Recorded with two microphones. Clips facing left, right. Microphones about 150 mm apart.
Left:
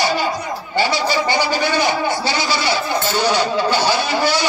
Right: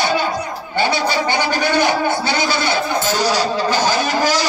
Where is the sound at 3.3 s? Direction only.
40° right (ahead or behind).